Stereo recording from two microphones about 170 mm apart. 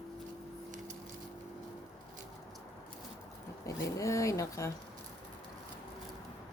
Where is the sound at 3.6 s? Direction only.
20° left (ahead or behind).